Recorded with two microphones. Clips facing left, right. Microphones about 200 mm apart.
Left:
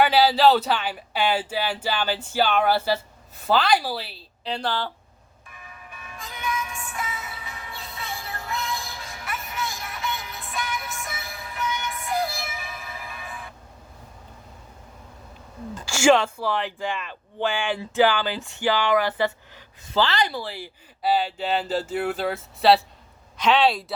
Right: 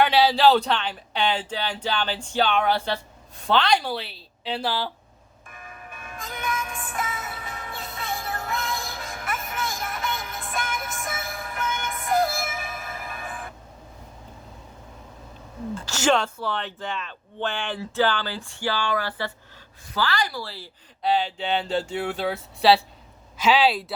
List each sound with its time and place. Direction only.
0.0 s speech: centre (ahead or behind)
5.5 s music: 50° right (ahead or behind)
15.7 s speech: 10° left (ahead or behind)
21.0 s speech: 5° left (ahead or behind)